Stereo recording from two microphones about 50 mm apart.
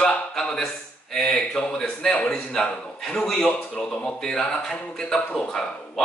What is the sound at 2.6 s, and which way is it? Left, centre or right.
Speech, centre.